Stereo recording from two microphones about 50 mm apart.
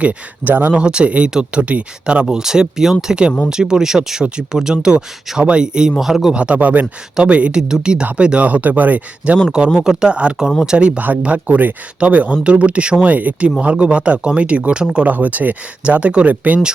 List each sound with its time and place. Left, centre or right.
0.4 s speech: right
0.7 s speech: right
2.2 s speech: centre
6.0 s a man's voice: centre
6.3 s speech: right
9.7 s speech: centre
11.4 s speech: right